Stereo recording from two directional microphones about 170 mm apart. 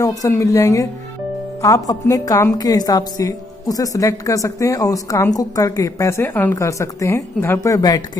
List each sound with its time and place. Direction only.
0.0 s a woman's voice: 20° left (ahead or behind)